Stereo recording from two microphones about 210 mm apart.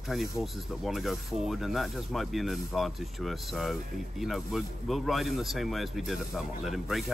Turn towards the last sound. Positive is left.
turn(degrees=0)  # may be behind; listen again after turning